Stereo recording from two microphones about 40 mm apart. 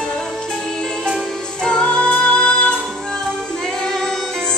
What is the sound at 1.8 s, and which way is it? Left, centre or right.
Music, left.